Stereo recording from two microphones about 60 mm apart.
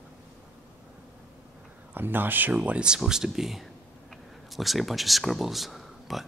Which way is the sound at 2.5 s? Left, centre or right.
Right.